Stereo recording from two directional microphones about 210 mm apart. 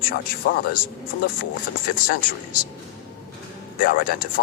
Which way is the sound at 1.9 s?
45° left (ahead or behind).